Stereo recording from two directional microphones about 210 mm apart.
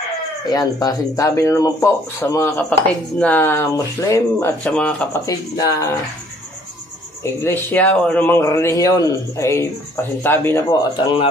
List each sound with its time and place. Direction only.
0.5 s a man's voice: 15° left (ahead or behind)
5.2 s a man's voice: 15° left (ahead or behind)
7.2 s a man's voice: 10° left (ahead or behind)